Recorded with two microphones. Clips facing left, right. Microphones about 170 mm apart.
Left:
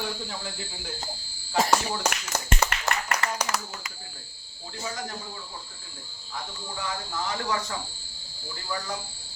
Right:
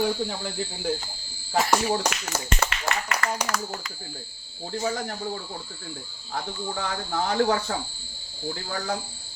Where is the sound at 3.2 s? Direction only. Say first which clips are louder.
Right 5 dB; 20° left (ahead or behind).